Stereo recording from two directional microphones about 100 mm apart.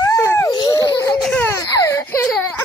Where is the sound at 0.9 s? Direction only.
35° left (ahead or behind).